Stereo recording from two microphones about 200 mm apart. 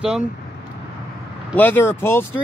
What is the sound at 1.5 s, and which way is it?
Speech, 10° left (ahead or behind).